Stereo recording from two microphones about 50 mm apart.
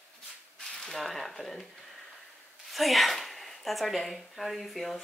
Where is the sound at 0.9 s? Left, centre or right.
Centre.